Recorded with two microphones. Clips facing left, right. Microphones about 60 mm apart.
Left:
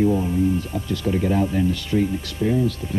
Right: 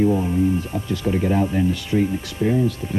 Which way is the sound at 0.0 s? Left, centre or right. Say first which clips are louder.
Right 1 dB; centre.